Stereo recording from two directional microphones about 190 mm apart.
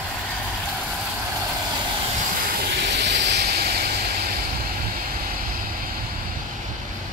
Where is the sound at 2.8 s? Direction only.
65° right (ahead or behind).